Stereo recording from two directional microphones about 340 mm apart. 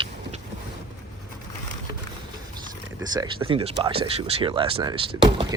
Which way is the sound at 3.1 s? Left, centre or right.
Centre.